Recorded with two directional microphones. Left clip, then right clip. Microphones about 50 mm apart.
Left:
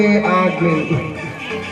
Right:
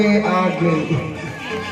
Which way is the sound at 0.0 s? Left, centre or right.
Left.